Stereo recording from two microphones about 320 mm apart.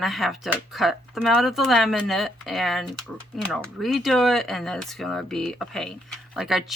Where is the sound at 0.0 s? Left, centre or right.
Centre.